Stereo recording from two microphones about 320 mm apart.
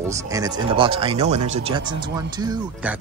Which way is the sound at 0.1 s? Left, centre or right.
Centre.